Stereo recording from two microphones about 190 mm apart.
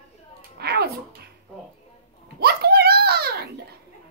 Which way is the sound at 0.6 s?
55° right (ahead or behind).